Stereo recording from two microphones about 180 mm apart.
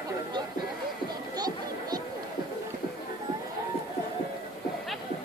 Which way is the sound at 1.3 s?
20° right (ahead or behind).